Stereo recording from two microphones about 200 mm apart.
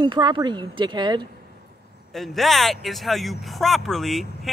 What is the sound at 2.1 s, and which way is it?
A man's voice, centre (ahead or behind).